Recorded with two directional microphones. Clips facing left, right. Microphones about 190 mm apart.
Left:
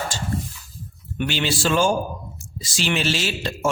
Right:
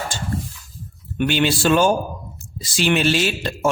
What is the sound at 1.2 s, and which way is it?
A man's voice, 55° right (ahead or behind).